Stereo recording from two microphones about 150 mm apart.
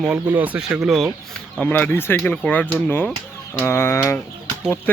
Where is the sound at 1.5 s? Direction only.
10° left (ahead or behind).